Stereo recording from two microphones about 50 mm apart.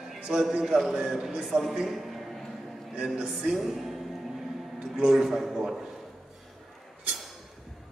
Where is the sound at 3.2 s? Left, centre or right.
Centre.